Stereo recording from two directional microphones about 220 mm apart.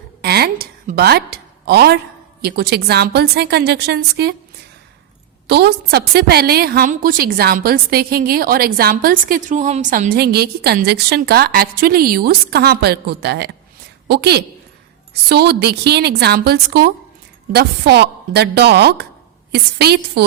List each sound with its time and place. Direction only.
0.2 s a sound: 45° right (ahead or behind)
2.4 s a woman's voice: 45° right (ahead or behind)
5.5 s a woman's voice: 50° right (ahead or behind)